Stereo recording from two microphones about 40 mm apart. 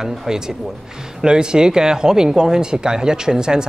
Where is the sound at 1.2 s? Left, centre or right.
Right.